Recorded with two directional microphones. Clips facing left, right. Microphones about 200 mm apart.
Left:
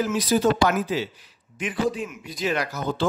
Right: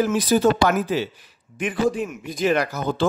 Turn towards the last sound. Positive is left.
turn(degrees=-50)  # may be behind; listen again after turning